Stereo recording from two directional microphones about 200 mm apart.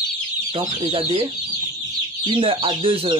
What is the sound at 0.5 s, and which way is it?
Speech, 25° right (ahead or behind).